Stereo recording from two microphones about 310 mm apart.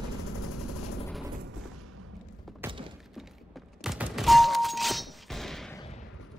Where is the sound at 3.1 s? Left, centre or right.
Centre.